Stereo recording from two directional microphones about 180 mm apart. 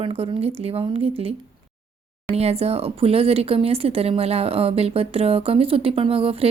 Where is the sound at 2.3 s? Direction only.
35° right (ahead or behind).